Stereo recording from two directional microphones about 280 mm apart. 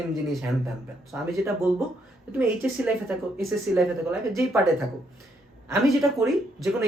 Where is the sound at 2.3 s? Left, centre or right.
Centre.